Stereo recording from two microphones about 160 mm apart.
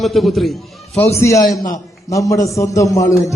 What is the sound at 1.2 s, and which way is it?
A man's voice, 20° left (ahead or behind).